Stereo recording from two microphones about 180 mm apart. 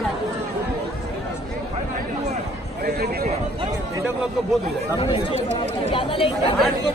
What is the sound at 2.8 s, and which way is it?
Speech, 60° right (ahead or behind).